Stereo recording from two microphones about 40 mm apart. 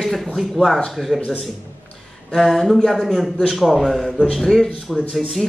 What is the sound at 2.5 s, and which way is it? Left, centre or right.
Speech, centre.